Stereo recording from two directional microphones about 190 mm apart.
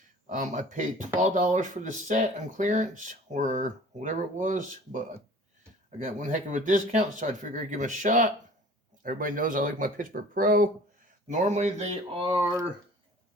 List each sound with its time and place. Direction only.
0.3 s speech: 40° right (ahead or behind)